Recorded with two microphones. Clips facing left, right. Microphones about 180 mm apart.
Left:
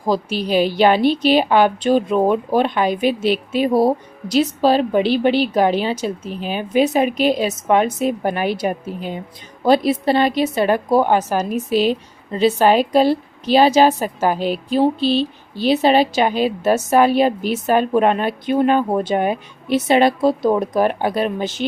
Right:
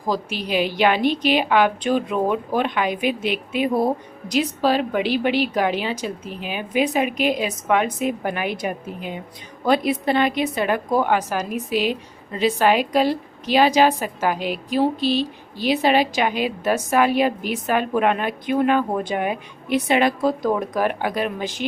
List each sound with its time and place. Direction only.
0.1 s a woman's voice: 35° left (ahead or behind)